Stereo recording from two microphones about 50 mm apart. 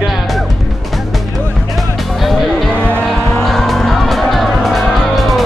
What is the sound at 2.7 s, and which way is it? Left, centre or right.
Music, left.